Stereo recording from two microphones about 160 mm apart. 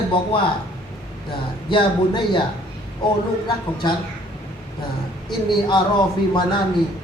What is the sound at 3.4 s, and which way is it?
Speech, 30° left (ahead or behind).